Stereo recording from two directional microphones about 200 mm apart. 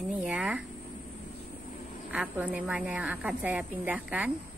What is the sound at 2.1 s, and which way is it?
A woman's voice, 5° right (ahead or behind).